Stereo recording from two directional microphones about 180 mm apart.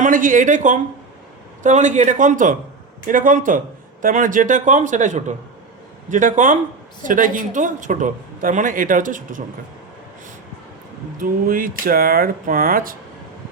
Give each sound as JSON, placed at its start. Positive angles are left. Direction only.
{"t": 0.0, "sound": "speech", "side_deg": -45}
{"t": 11.2, "sound": "speech", "side_deg": -50}